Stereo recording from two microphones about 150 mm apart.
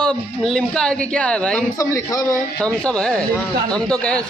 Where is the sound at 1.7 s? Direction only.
20° left (ahead or behind).